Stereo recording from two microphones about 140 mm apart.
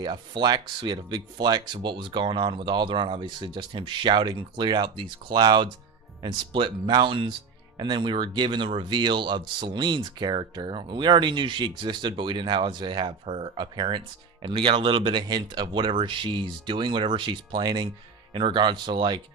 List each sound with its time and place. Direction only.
0.0 s speech: 35° right (ahead or behind)